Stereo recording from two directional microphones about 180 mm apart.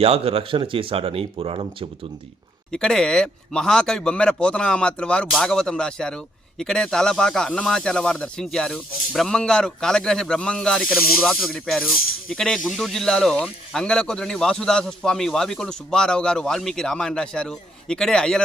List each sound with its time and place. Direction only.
0.0 s speech: 35° right (ahead or behind)
2.7 s speech: 5° left (ahead or behind)